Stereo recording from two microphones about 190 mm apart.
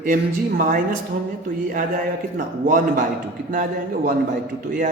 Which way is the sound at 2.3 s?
45° right (ahead or behind).